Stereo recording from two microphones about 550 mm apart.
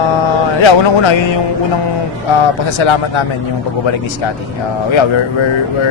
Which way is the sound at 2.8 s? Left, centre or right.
Left.